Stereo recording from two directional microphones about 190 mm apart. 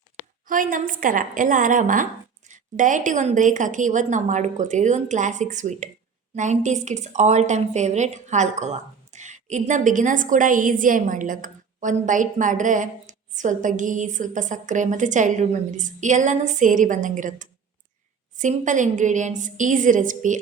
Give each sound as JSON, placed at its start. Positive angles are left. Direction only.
{"t": 0.4, "sound": "a woman's voice", "side_deg": -45}